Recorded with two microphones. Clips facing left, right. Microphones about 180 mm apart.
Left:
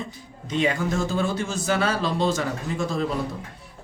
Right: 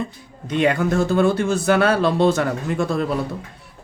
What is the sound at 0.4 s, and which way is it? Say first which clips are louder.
Speech: right 5 dB; 60° right (ahead or behind).